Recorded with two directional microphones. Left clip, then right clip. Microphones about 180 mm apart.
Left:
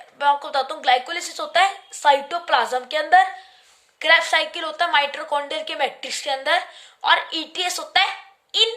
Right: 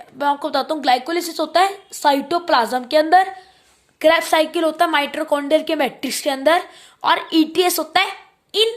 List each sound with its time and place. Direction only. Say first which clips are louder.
0.2 s a woman's voice: even; 30° right (ahead or behind)
4.0 s a woman's voice: right 2 dB; 45° right (ahead or behind)